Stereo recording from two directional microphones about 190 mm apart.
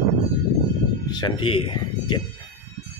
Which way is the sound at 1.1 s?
25° left (ahead or behind).